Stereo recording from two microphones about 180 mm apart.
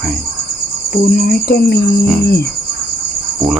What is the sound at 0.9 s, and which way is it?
Speech, 55° left (ahead or behind).